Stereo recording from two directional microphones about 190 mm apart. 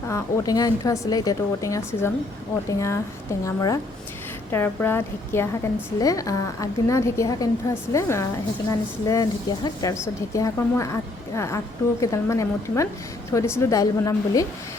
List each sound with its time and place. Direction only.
0.1 s a woman's voice: 20° left (ahead or behind)